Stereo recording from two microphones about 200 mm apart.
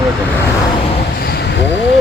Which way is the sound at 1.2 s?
50° left (ahead or behind).